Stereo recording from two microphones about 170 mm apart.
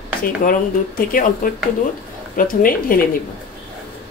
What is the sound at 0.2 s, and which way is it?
A woman's voice, 55° left (ahead or behind).